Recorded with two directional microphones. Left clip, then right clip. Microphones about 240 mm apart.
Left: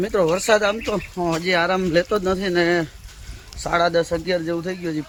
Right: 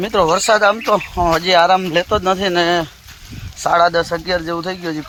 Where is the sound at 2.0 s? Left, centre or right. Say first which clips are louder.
Right 6 dB; right.